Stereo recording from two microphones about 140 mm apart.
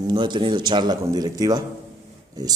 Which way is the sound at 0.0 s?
35° right (ahead or behind).